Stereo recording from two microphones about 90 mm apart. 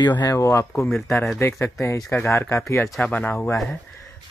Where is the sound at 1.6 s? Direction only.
25° left (ahead or behind).